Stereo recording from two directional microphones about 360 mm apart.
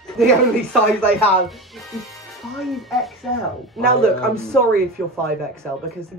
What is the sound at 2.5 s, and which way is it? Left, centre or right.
Speech, centre.